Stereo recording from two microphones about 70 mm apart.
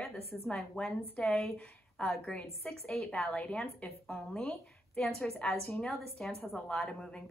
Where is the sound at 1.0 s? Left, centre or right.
Left; by 6.1 s centre.